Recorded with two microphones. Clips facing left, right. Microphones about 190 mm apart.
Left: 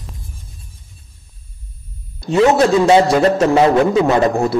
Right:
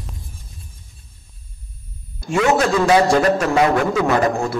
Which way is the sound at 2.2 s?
30° left (ahead or behind).